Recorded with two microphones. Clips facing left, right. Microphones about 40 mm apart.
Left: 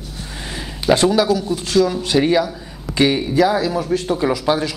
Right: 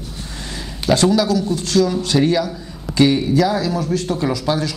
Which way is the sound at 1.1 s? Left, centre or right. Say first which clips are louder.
Even; centre.